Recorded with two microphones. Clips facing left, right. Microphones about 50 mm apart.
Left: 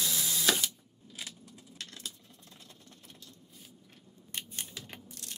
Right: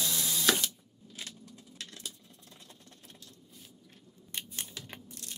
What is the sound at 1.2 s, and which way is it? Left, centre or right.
Keys jangling, centre.